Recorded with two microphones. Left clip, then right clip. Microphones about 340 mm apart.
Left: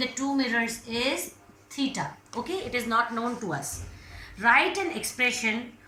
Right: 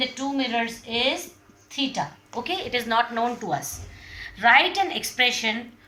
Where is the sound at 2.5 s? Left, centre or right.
Right.